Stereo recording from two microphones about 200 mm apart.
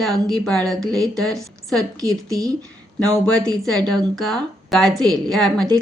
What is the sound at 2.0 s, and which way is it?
Speech, 20° right (ahead or behind).